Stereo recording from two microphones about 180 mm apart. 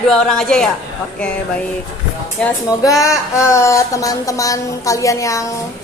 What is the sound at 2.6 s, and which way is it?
Speech, 20° left (ahead or behind).